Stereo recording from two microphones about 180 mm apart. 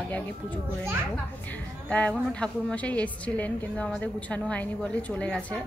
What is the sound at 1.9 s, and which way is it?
A woman's voice, 5° left (ahead or behind).